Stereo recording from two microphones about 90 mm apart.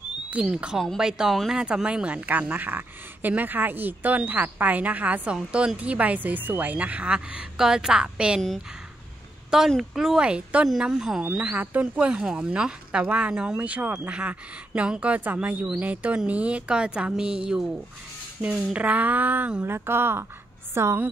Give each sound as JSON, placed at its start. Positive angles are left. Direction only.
{"t": 0.3, "sound": "a woman's voice", "side_deg": -10}
{"t": 9.7, "sound": "a woman's voice", "side_deg": -5}